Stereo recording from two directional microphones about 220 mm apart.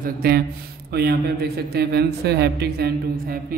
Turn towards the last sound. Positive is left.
turn(degrees=-45)  # may be behind; listen again after turning